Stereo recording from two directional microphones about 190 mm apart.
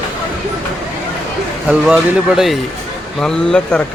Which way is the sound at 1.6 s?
5° right (ahead or behind).